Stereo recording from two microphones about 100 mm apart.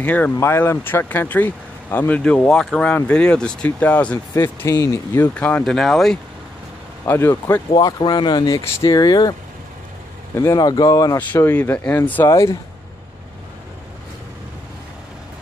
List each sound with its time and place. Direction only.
0.0 s speech: 15° left (ahead or behind)
4.7 s speech: 30° left (ahead or behind)
5.3 s speech: 15° left (ahead or behind)
5.6 s speech: centre (ahead or behind)
7.1 s speech: 25° left (ahead or behind)
7.7 s speech: 45° left (ahead or behind)
10.3 s speech: 30° left (ahead or behind)
11.3 s speech: 25° left (ahead or behind)
12.3 s speech: 30° left (ahead or behind)